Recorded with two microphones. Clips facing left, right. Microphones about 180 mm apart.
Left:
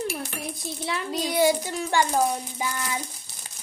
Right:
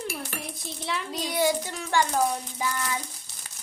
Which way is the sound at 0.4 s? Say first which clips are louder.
Left 3 dB; 5° left (ahead or behind).